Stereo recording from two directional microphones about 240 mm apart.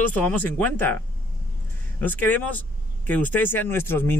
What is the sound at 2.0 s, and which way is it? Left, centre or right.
Speech, centre.